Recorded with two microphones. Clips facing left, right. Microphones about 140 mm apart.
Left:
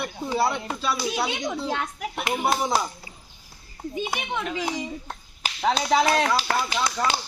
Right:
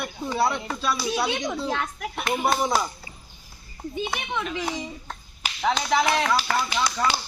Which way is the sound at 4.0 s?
10° left (ahead or behind).